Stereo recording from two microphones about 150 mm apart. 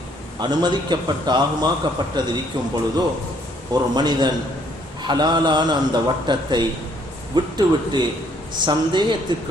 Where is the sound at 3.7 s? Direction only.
30° right (ahead or behind).